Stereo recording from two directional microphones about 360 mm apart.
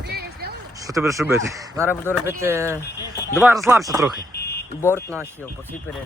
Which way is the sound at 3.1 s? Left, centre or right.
Centre.